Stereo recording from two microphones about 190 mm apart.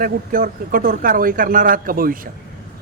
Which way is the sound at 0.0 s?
50° right (ahead or behind).